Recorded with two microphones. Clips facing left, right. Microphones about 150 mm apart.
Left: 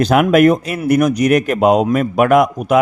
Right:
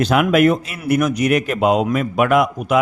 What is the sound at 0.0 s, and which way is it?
A man's voice, 45° left (ahead or behind).